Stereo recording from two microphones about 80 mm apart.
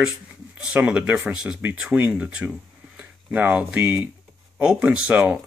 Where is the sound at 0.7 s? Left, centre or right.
Centre.